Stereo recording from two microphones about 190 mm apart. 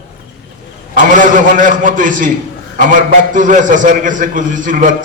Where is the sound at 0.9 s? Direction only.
45° right (ahead or behind).